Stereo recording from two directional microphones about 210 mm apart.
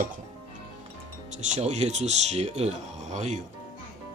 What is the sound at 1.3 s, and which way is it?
Speech, 35° right (ahead or behind).